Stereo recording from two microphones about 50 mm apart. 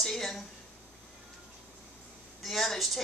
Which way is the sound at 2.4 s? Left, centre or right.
Centre.